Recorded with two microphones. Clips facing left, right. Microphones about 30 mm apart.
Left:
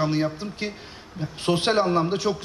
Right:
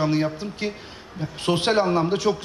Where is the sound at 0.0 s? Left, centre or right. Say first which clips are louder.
Right 1 dB; centre.